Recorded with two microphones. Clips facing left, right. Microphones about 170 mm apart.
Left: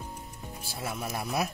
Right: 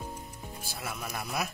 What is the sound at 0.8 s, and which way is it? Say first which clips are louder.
Speech: left 4 dB; 25° left (ahead or behind).